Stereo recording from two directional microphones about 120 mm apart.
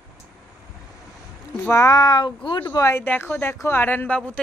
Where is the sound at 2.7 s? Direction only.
25° left (ahead or behind).